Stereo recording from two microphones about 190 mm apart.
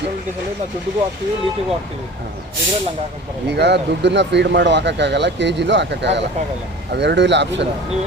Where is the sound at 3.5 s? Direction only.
60° right (ahead or behind).